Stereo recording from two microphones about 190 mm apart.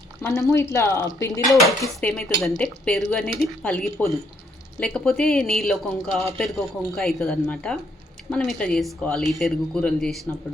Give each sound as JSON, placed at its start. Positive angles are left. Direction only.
{"t": 0.2, "sound": "speech", "side_deg": 15}
{"t": 1.8, "sound": "speech", "side_deg": 5}